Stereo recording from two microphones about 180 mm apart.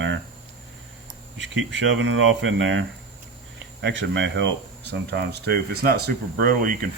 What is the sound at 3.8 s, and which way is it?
Speech, 85° right.